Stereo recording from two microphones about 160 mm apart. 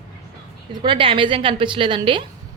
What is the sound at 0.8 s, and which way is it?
A woman's voice, 30° right (ahead or behind).